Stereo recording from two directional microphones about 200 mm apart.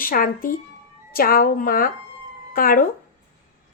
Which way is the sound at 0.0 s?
45° left (ahead or behind).